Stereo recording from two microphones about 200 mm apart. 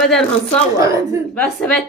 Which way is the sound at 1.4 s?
5° left (ahead or behind).